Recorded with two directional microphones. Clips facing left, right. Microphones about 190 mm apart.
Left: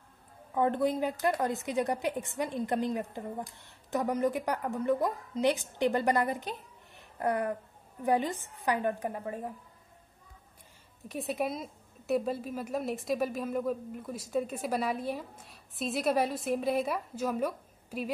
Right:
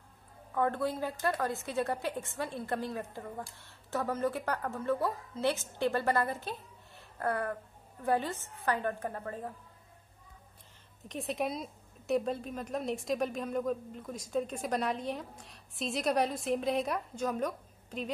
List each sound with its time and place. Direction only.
0.6 s a woman's voice: 20° left (ahead or behind)
7.0 s a sound: 15° left (ahead or behind)
8.0 s a woman's voice: 15° left (ahead or behind)
11.1 s a woman's voice: centre (ahead or behind)